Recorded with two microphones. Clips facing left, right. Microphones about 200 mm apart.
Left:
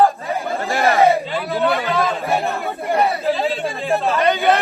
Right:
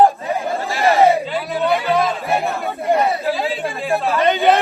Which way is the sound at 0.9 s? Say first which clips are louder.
Right 1 dB; 15° right (ahead or behind).